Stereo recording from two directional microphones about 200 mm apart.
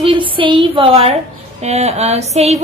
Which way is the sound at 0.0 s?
25° right (ahead or behind).